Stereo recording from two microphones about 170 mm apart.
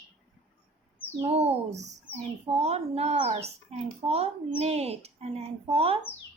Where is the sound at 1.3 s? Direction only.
35° right (ahead or behind).